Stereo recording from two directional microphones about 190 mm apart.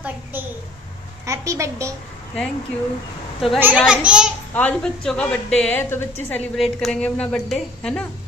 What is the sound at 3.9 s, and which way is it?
Speech, 5° right (ahead or behind).